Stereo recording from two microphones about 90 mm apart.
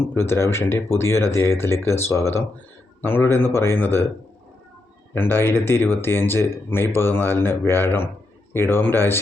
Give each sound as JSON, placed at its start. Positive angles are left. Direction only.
{"t": 0.0, "sound": "speech", "side_deg": 25}
{"t": 5.1, "sound": "speech", "side_deg": 25}